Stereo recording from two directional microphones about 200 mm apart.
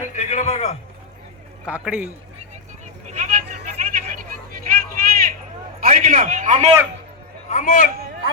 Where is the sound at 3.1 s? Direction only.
40° right (ahead or behind).